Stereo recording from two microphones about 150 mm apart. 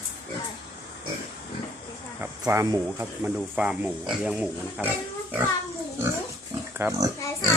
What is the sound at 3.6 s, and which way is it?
Speech, 5° right (ahead or behind).